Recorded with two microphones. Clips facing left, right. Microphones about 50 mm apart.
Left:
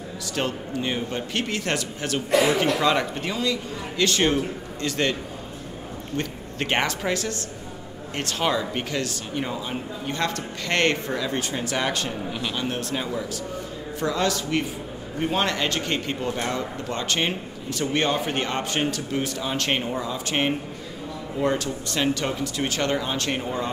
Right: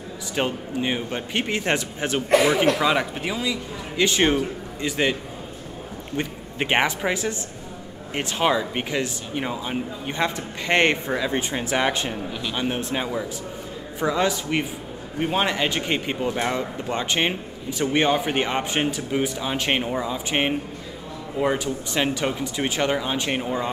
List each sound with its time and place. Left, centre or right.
0.4 s speech: centre
2.7 s a man's voice: centre
6.1 s a man's voice: centre
12.3 s speech: centre
12.5 s a man's voice: centre